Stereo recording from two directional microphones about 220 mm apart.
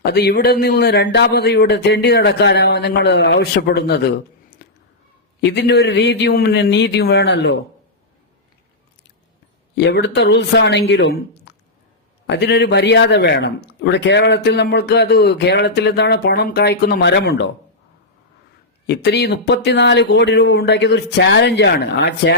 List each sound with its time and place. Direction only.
0.0 s speech: 45° left (ahead or behind)
4.6 s a sound: 45° left (ahead or behind)
5.4 s speech: 50° left (ahead or behind)
9.7 s speech: 50° left (ahead or behind)
18.9 s speech: 50° left (ahead or behind)